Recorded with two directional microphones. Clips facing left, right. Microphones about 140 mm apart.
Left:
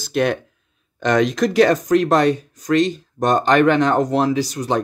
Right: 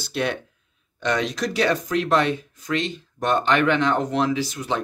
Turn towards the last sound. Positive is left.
turn(degrees=40)  # may be behind; listen again after turning